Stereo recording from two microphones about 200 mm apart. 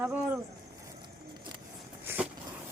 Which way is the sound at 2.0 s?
10° right (ahead or behind).